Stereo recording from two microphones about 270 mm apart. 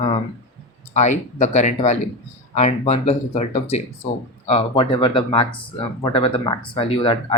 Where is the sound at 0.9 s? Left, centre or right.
Left.